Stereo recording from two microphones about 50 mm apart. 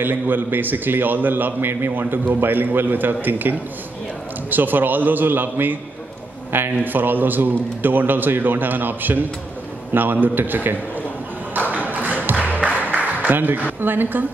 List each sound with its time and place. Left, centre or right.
0.0 s a man's voice: right
11.7 s a sound: right
12.5 s music: right
13.7 s a woman's voice: right